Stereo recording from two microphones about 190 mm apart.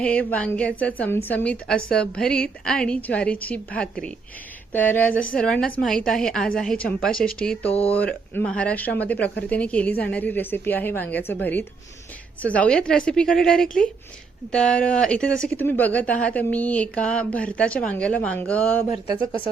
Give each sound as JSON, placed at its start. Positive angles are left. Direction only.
{"t": 0.0, "sound": "a woman's voice", "side_deg": 5}
{"t": 7.7, "sound": "speech", "side_deg": 30}
{"t": 7.9, "sound": "a woman's voice", "side_deg": 10}